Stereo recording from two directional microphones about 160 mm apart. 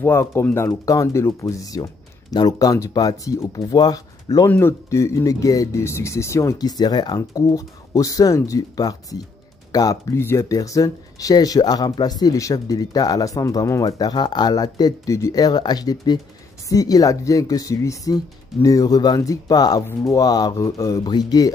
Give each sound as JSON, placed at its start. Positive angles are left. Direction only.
{"t": 0.0, "sound": "speech", "side_deg": 15}